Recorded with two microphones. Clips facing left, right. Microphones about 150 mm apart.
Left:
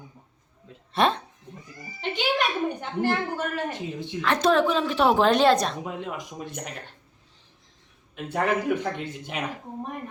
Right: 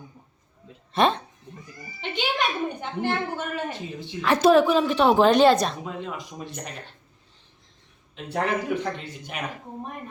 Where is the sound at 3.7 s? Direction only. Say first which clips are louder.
Left 2 dB; 20° left (ahead or behind).